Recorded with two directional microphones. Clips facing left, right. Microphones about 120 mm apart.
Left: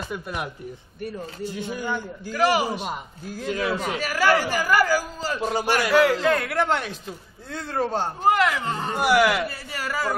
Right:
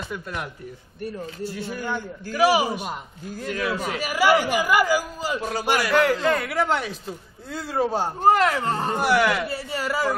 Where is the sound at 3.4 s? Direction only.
25° left (ahead or behind).